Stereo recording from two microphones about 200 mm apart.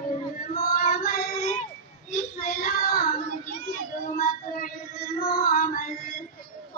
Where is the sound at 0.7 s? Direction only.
40° left (ahead or behind).